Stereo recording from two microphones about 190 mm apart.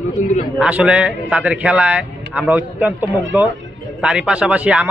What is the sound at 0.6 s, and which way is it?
A man's voice, 5° right (ahead or behind).